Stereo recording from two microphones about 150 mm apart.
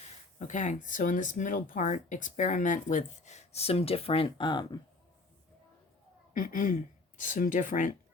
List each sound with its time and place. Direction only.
0.3 s speech: 55° left (ahead or behind); by 4.8 s 30° left (ahead or behind)
6.3 s speech: 65° left (ahead or behind)